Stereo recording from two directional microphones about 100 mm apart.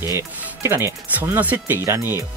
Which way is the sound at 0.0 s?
30° right (ahead or behind).